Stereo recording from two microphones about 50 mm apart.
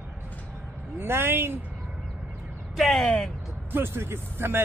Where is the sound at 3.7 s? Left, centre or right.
Right.